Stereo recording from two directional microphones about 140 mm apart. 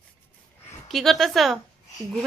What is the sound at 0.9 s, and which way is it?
Speech, centre (ahead or behind).